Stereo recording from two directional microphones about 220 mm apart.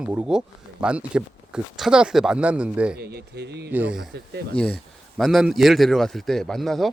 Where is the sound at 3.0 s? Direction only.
50° right (ahead or behind).